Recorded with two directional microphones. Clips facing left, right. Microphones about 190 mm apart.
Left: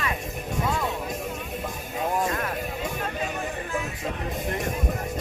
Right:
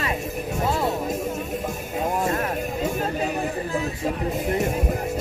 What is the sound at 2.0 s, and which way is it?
Music, 10° right (ahead or behind).